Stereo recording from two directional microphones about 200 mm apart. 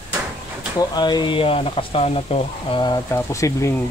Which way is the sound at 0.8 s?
20° left (ahead or behind).